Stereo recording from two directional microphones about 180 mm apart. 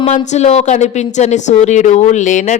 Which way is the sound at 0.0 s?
35° left (ahead or behind).